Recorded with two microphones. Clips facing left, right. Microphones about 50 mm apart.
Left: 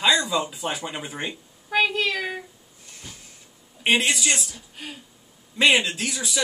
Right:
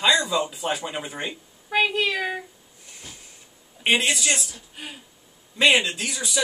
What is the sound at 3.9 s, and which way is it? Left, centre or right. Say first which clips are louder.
Speech: even; centre.